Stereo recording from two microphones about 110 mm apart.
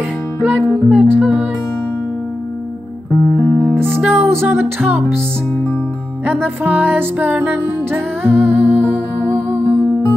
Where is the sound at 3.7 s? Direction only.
20° right (ahead or behind).